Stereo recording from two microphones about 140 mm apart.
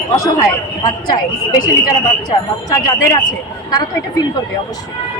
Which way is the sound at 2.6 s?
25° left (ahead or behind).